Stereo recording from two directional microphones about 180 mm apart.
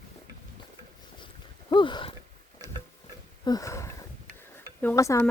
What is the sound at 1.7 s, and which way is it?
Speech, 25° left (ahead or behind).